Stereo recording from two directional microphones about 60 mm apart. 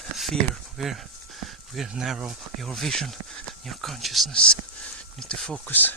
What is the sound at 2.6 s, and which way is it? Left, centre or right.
Speech, centre.